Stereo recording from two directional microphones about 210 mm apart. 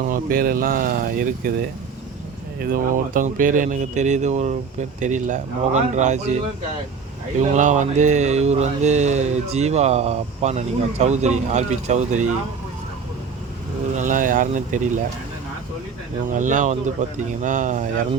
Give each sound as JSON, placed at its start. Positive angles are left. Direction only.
{"t": 0.0, "sound": "speech", "side_deg": -45}
{"t": 2.6, "sound": "mantra", "side_deg": -40}
{"t": 7.5, "sound": "mantra", "side_deg": -35}
{"t": 13.9, "sound": "mantra", "side_deg": -35}
{"t": 16.3, "sound": "mantra", "side_deg": -35}